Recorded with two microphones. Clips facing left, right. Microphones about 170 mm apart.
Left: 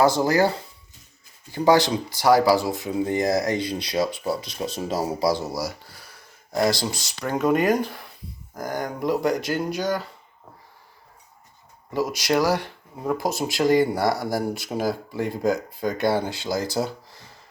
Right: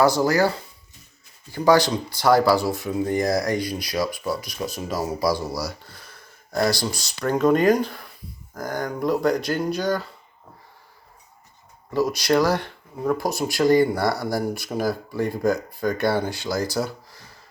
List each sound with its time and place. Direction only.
0.0 s speech: 20° left (ahead or behind)
11.9 s speech: 15° left (ahead or behind)
16.7 s a sound: 20° left (ahead or behind)